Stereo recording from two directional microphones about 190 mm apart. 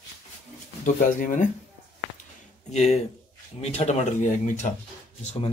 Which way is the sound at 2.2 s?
35° left (ahead or behind).